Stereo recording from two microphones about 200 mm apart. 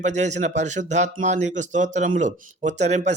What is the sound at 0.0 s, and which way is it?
A man's voice, 35° right (ahead or behind).